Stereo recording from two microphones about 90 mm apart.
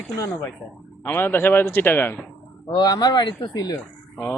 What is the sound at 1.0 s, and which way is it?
A man's voice, 25° left (ahead or behind).